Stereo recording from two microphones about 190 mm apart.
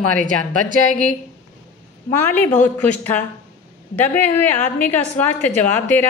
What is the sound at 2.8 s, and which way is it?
A woman's voice, 10° left (ahead or behind).